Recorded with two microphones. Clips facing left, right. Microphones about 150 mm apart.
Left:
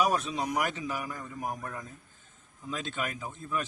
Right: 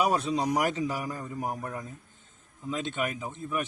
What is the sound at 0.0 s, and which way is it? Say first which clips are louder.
A man's voice: right 2 dB; 30° right (ahead or behind).